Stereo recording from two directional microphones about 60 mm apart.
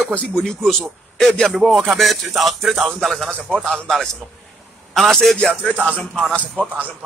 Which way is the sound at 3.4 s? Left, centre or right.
Centre.